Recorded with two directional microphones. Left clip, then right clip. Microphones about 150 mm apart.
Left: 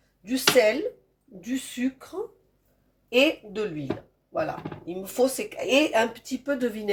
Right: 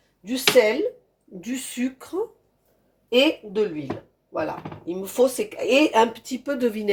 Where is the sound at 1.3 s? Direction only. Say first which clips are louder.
Right 2 dB; 50° right (ahead or behind).